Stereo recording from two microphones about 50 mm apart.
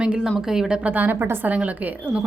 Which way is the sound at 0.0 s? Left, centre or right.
Centre.